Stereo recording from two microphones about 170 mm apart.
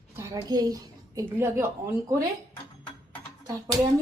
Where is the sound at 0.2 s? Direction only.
20° right (ahead or behind).